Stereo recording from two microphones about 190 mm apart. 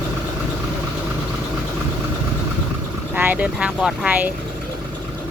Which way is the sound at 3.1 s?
10° right (ahead or behind).